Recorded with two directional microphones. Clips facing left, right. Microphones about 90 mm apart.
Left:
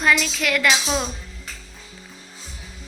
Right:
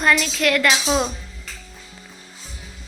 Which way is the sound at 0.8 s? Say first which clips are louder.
Right 4 dB; 10° right (ahead or behind).